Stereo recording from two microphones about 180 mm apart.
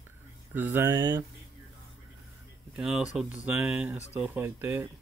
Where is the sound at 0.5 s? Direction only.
10° right (ahead or behind).